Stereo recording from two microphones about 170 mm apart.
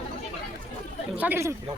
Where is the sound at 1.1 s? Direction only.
10° right (ahead or behind).